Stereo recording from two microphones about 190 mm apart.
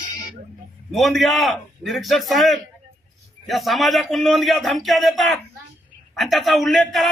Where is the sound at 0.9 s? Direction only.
Centre (ahead or behind).